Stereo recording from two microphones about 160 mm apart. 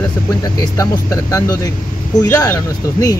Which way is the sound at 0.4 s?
20° left (ahead or behind).